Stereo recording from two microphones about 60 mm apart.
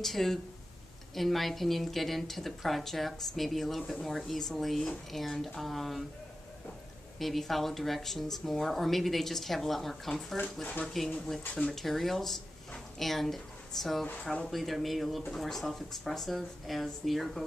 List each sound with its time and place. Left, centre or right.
0.0 s speech: centre
7.2 s speech: centre
10.6 s speech: centre
11.2 s a woman's voice: centre